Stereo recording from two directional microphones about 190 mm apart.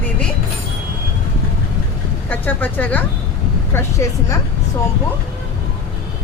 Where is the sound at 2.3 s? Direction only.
10° left (ahead or behind).